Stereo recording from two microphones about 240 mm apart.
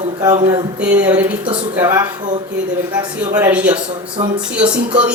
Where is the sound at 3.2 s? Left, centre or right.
Centre.